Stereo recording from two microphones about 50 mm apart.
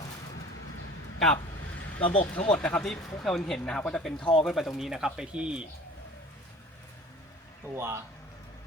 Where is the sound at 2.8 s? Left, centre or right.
Centre.